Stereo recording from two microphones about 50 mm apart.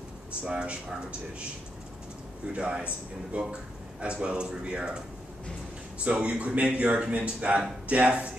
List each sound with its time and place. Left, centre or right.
0.4 s a man's voice: centre
2.5 s a man's voice: right
6.0 s a man's voice: right